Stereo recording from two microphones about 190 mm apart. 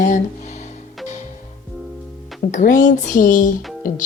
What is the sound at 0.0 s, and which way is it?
Music, 40° left (ahead or behind).